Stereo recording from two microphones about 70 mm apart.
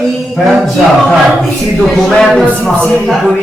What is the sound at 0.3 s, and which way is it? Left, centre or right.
Music, centre.